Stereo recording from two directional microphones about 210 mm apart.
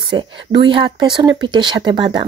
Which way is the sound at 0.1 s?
20° right (ahead or behind).